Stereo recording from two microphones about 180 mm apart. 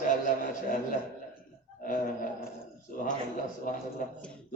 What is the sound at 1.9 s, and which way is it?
Speech, 45° left (ahead or behind).